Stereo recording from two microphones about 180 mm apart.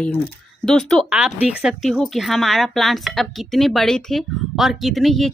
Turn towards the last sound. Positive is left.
turn(degrees=0)  # may be behind; listen again after turning